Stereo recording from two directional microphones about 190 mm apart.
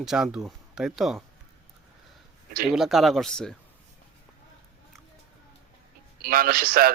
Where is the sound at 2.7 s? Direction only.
Centre (ahead or behind).